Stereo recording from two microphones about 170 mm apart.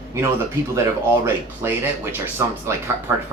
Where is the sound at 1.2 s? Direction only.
15° right (ahead or behind).